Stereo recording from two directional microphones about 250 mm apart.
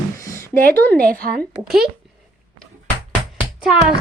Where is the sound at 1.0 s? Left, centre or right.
Right.